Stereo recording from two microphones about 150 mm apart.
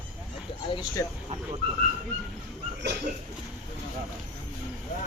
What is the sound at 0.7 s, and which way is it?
Speech, 25° left (ahead or behind).